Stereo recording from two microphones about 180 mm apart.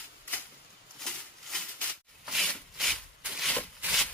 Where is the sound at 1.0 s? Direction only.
5° left (ahead or behind).